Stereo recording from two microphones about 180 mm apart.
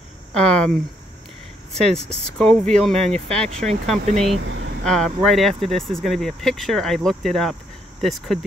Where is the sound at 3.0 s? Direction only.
35° right (ahead or behind).